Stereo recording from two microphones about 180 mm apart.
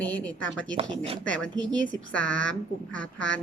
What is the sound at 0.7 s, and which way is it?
Speech, 30° right (ahead or behind).